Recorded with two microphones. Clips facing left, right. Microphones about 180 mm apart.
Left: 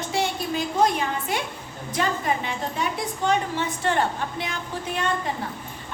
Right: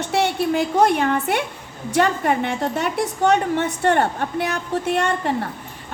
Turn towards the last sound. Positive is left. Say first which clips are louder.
# right 6 dB
turn(degrees=-65)  # may be behind; listen again after turning